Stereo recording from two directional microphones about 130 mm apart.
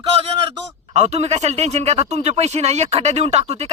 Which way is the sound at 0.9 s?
55° right (ahead or behind).